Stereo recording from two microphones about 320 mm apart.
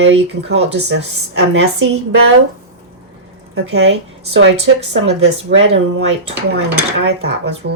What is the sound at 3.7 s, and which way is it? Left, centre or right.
Speech, right.